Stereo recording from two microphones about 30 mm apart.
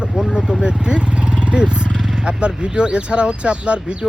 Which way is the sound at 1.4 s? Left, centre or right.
Right.